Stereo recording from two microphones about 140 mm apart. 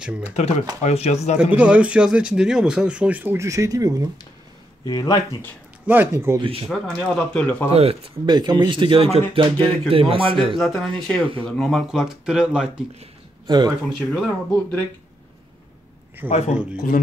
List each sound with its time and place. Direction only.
0.2 s speech: 50° left (ahead or behind)
1.5 s speech: 10° right (ahead or behind); by 4.1 s 25° right (ahead or behind)
4.8 s speech: 25° left (ahead or behind)
5.9 s speech: 15° right (ahead or behind)
6.7 s speech: 5° left (ahead or behind)
7.7 s speech: 45° right (ahead or behind)
8.3 s speech: 30° right (ahead or behind)
10.6 s speech: 5° left (ahead or behind)
13.5 s speech: 30° right (ahead or behind)
14.1 s speech: 5° left (ahead or behind)
16.3 s speech: 50° left (ahead or behind)